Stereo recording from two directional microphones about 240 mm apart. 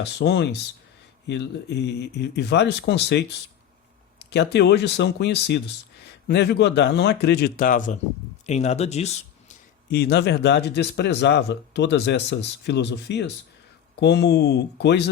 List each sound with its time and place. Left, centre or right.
0.0 s speech: left
4.2 s a sound: left
4.5 s speech: left
9.9 s speech: left